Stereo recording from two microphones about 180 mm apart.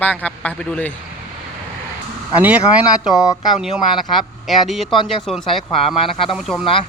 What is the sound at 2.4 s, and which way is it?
Speech, 5° right (ahead or behind).